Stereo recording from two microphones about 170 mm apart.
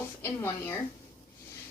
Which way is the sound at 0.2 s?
15° left (ahead or behind).